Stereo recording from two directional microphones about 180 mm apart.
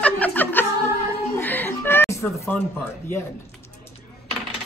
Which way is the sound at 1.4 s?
10° left (ahead or behind).